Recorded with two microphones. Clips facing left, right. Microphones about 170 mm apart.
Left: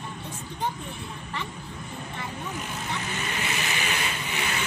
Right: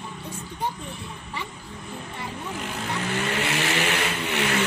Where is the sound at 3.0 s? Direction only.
70° right (ahead or behind).